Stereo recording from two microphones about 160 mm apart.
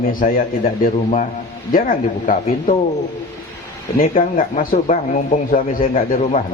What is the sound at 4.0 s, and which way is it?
Speech, 60° left (ahead or behind).